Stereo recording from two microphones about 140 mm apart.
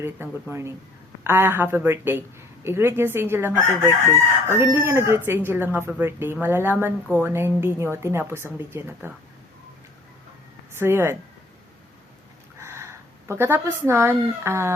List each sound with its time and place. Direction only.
0.0 s speech: 15° right (ahead or behind)
10.7 s speech: 15° right (ahead or behind)
12.5 s speech: 20° right (ahead or behind)